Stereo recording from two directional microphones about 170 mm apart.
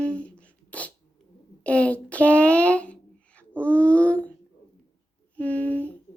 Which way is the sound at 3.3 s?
10° left (ahead or behind).